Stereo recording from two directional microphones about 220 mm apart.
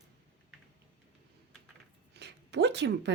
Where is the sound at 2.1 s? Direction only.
50° right (ahead or behind).